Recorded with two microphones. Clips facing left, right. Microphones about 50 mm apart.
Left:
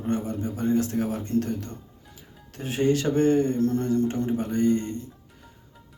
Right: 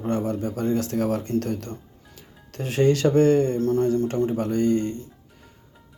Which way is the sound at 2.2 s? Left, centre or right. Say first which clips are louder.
Right 4 dB; right.